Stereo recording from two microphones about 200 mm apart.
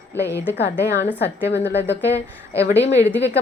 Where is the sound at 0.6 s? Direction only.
55° left (ahead or behind).